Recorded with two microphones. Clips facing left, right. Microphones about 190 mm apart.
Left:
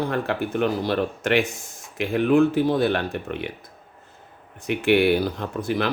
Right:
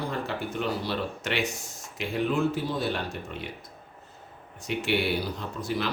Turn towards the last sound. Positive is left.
turn(degrees=55)  # may be behind; listen again after turning